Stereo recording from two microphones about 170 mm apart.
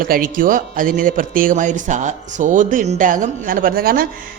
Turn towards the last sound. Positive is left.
turn(degrees=-60)  # may be behind; listen again after turning